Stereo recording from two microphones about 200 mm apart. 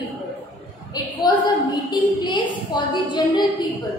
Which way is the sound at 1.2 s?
20° left (ahead or behind).